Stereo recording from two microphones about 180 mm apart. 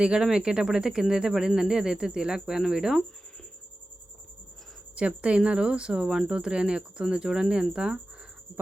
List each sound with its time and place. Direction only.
0.0 s speech: 5° right (ahead or behind)
4.9 s speech: 5° right (ahead or behind)